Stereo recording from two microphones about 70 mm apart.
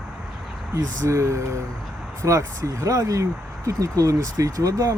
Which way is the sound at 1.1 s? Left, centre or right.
Right.